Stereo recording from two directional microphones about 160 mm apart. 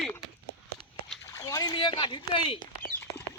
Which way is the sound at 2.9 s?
10° left (ahead or behind).